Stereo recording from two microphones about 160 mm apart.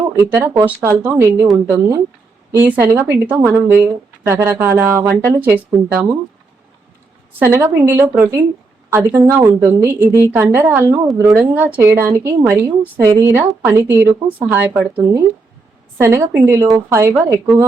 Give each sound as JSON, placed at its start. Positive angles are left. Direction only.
{"t": 0.6, "sound": "a woman's voice", "side_deg": -10}
{"t": 7.3, "sound": "a woman's voice", "side_deg": -15}